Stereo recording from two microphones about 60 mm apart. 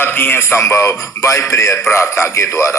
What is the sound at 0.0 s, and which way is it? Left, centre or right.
A man's voice, left.